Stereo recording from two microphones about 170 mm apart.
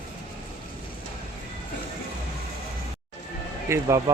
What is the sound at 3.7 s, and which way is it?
Speech, 20° right (ahead or behind).